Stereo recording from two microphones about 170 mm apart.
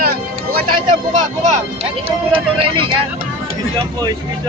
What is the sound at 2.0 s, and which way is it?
Speech, 30° right (ahead or behind).